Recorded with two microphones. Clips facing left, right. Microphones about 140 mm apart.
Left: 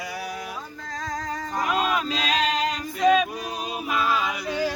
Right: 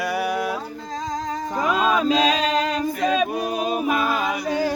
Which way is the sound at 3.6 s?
50° right (ahead or behind).